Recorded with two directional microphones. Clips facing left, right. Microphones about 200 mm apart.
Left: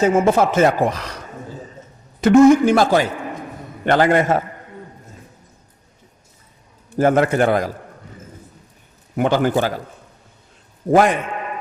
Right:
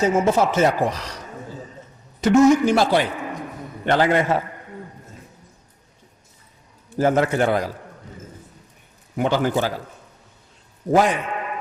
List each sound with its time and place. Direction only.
0.0 s speech: 55° left (ahead or behind)
2.2 s speech: 55° left (ahead or behind)
6.9 s speech: 55° left (ahead or behind)
9.1 s a man's voice: 55° left (ahead or behind)
10.9 s speech: 55° left (ahead or behind)